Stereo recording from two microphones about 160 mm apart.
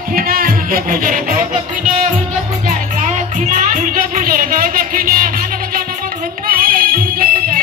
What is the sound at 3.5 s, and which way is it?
Music, 55° right (ahead or behind).